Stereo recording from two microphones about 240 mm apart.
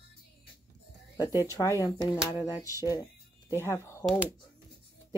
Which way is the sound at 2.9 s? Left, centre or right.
Centre.